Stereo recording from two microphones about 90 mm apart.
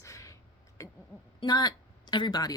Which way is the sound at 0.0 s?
35° left (ahead or behind).